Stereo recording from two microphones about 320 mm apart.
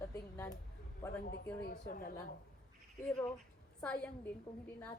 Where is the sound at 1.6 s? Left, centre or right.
Left.